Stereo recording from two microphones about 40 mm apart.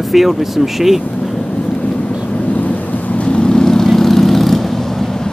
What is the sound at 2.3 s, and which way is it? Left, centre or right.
Vehicle, left.